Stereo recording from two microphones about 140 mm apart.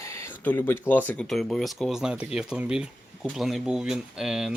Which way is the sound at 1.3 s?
Centre (ahead or behind).